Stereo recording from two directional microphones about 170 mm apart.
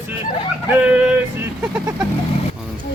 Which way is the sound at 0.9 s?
10° right (ahead or behind).